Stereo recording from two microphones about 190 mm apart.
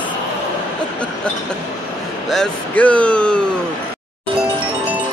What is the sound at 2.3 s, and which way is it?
Speech, 5° left (ahead or behind).